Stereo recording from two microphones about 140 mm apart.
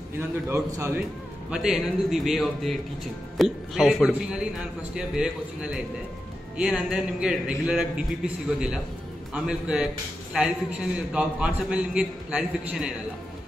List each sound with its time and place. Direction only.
0.5 s a man's voice: 20° right (ahead or behind)
1.5 s a man's voice: 5° right (ahead or behind)